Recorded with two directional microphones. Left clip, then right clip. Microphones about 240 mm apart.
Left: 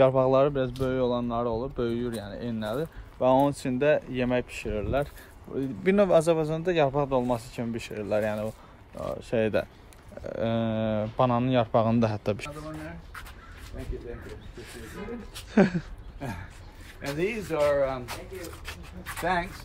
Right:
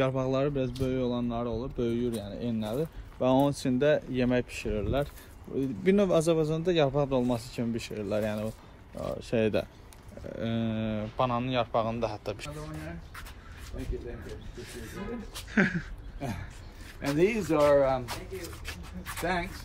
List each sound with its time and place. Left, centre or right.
0.0 s speech: left
1.8 s speech: left
10.2 s speech: left
13.8 s speech: centre
15.5 s speech: centre
17.0 s speech: centre
17.3 s speech: right
18.4 s speech: centre
19.2 s speech: left